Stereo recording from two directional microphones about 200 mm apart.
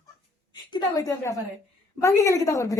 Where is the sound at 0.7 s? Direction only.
20° left (ahead or behind).